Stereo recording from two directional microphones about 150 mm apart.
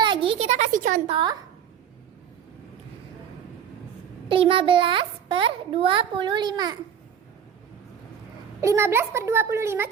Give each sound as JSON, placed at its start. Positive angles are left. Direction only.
{"t": 0.0, "sound": "a sound", "side_deg": -35}
{"t": 1.0, "sound": "a child's voice", "side_deg": -30}
{"t": 4.3, "sound": "a child's voice", "side_deg": -35}
{"t": 8.6, "sound": "speech", "side_deg": -15}